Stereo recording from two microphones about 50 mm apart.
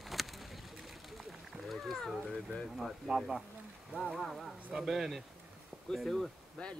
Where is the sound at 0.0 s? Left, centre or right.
Centre.